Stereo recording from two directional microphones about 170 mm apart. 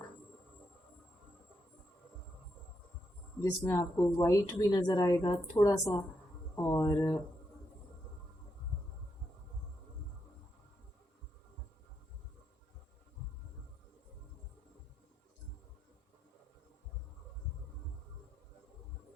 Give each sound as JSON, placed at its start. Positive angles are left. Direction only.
{"t": 3.4, "sound": "speech", "side_deg": 15}